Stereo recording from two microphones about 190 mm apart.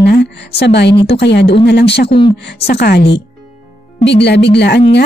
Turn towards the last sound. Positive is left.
turn(degrees=60)  # may be behind; listen again after turning